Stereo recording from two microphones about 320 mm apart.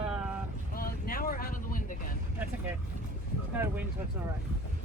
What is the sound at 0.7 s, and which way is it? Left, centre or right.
Vehicle, left.